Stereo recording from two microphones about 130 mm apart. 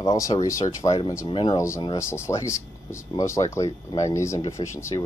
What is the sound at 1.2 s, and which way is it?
Speech, 40° left (ahead or behind).